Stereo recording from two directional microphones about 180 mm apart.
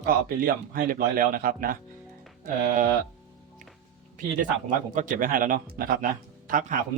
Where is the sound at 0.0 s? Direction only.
50° right (ahead or behind).